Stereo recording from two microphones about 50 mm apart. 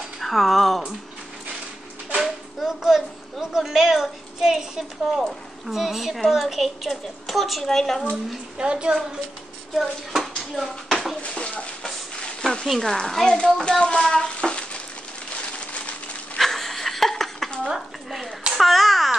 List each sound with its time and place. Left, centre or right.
0.2 s speech: centre
2.2 s a woman's voice: centre
8.5 s a woman's voice: centre
9.8 s speech: centre
10.5 s a sound: centre
11.2 s a sound: left
12.8 s speech: centre
16.3 s wheeze: centre
17.6 s a sound: centre